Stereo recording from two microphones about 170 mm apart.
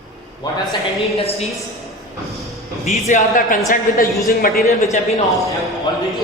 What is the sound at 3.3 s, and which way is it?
A man's voice, 55° left (ahead or behind).